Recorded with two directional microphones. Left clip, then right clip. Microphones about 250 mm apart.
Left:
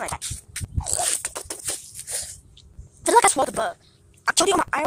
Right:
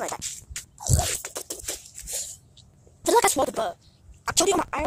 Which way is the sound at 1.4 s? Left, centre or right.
Centre.